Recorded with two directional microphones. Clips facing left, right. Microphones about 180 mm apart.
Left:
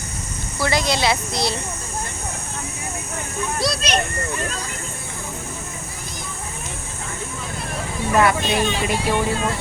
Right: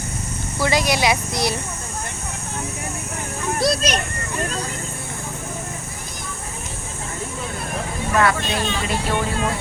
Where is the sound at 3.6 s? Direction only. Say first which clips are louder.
Right 5 dB; 50° right (ahead or behind).